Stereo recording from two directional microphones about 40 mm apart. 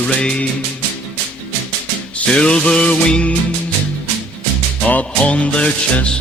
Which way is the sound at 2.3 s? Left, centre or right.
Left.